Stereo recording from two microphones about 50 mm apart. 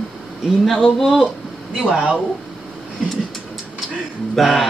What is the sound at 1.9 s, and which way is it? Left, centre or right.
Speech, right.